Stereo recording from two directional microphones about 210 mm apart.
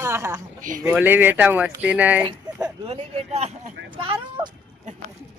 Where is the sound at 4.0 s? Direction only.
25° right (ahead or behind).